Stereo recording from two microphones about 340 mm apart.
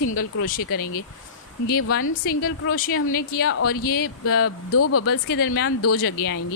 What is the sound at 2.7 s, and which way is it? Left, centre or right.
Speech, left.